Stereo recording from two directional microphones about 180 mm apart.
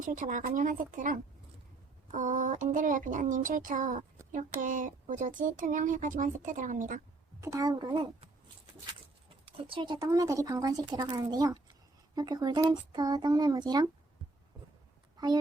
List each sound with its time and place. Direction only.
0.0 s speech: 45° right (ahead or behind)
7.4 s speech: 20° right (ahead or behind)
9.6 s speech: 25° right (ahead or behind)